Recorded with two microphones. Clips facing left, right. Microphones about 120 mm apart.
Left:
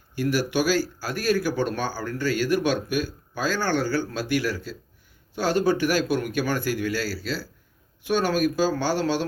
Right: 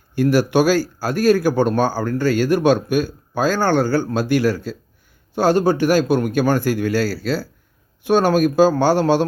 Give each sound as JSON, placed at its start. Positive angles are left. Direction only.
{"t": 0.2, "sound": "speech", "side_deg": -60}